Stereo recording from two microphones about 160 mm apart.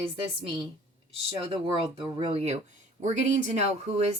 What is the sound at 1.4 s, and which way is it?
Speech, 35° right (ahead or behind).